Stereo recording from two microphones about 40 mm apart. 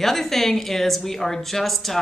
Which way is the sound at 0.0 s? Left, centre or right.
Centre.